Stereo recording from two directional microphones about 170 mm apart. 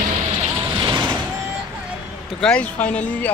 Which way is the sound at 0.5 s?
25° right (ahead or behind).